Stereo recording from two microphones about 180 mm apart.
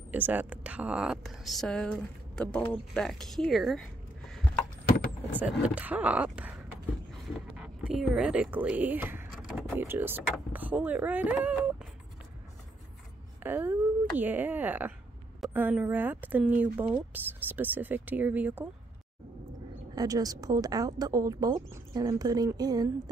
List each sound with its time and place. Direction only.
0.1 s speech: 10° right (ahead or behind)
5.4 s speech: 10° right (ahead or behind)
7.5 s speech: 5° right (ahead or behind)
13.4 s speech: 10° right (ahead or behind)
20.0 s speech: 20° right (ahead or behind)